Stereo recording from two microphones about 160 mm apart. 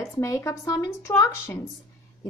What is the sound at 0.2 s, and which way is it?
A woman's voice, 20° left (ahead or behind).